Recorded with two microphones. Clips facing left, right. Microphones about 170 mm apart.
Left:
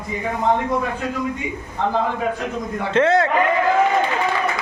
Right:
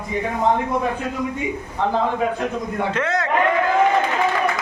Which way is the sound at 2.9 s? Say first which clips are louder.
Left 11 dB; 30° left (ahead or behind).